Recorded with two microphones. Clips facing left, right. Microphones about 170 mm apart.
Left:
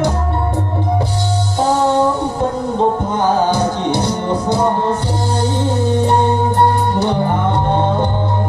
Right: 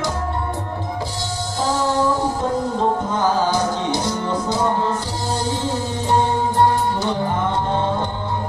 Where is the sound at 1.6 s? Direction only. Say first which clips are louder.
Left 6 dB; 65° left (ahead or behind).